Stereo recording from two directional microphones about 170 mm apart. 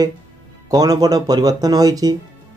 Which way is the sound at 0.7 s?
20° right (ahead or behind).